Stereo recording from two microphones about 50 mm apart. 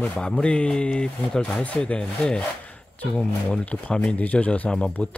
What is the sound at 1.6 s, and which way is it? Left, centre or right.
A man's voice, left.